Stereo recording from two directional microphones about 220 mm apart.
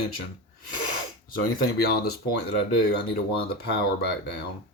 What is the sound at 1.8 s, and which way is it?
Speech, 45° left (ahead or behind).